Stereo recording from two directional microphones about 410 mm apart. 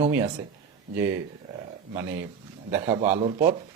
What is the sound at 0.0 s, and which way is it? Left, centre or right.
Speech, centre.